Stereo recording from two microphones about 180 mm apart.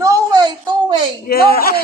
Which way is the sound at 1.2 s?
55° left (ahead or behind).